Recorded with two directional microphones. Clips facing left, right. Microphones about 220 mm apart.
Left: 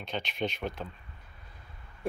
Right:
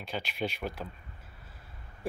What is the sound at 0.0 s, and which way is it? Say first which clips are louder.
Speech: left 1 dB; 5° right (ahead or behind).